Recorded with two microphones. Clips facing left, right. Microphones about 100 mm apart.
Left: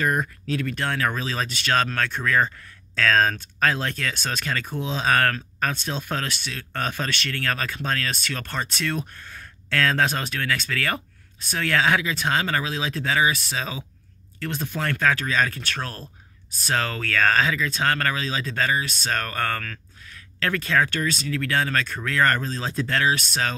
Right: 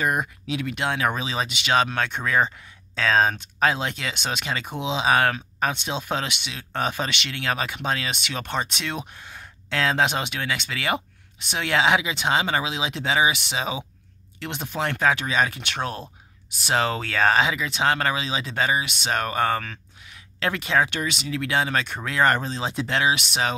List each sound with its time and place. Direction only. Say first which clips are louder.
0.0 s speech: even; 10° right (ahead or behind)